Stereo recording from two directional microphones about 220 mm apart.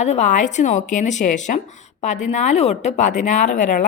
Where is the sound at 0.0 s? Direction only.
30° left (ahead or behind).